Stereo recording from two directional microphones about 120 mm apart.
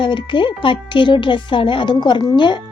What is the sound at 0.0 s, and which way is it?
Speech, 40° left (ahead or behind).